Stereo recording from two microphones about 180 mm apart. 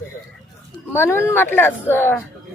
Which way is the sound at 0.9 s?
15° left (ahead or behind).